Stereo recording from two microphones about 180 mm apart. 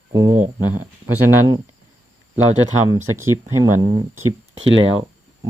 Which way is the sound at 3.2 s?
15° right (ahead or behind).